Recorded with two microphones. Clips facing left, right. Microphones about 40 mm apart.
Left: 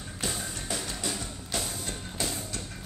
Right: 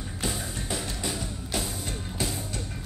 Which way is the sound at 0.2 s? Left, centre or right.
Centre.